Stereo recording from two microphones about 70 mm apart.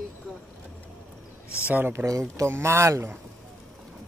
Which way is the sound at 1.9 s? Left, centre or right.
Right.